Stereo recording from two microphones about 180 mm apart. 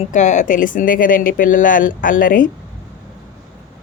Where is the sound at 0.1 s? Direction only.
40° left (ahead or behind).